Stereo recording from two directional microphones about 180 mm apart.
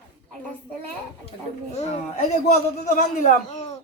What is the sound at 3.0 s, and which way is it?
Speech, 45° left (ahead or behind).